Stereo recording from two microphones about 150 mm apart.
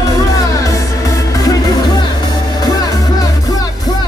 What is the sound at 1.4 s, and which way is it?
Music, 25° left (ahead or behind).